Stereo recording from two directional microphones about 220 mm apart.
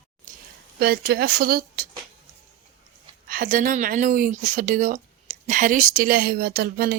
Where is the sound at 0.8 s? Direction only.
45° right (ahead or behind).